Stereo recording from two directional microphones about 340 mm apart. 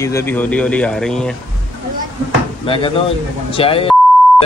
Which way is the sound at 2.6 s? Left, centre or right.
Centre.